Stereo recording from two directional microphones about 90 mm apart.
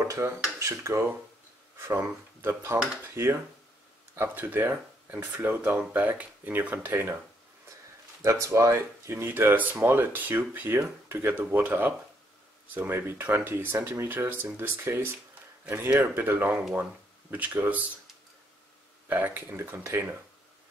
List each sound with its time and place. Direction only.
0.0 s speech: 30° right (ahead or behind)
8.2 s speech: 35° right (ahead or behind); by 17.8 s 15° right (ahead or behind)
19.0 s speech: 20° right (ahead or behind)